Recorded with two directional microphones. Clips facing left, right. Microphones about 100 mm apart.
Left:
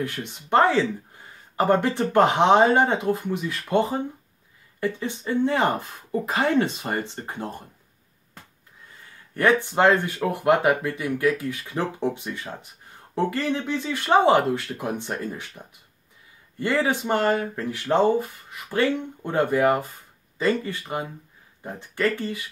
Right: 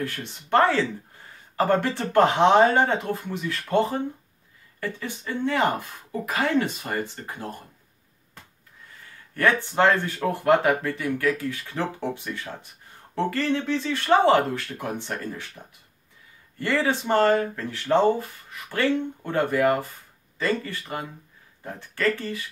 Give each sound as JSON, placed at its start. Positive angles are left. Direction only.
{"t": 0.0, "sound": "speech", "side_deg": 15}
{"t": 9.3, "sound": "speech", "side_deg": 15}